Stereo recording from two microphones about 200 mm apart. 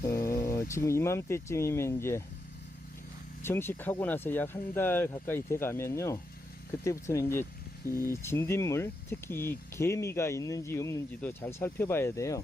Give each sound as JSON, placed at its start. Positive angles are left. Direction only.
{"t": 0.3, "sound": "a sound", "side_deg": 15}
{"t": 0.7, "sound": "speech", "side_deg": 15}
{"t": 3.4, "sound": "speech", "side_deg": 10}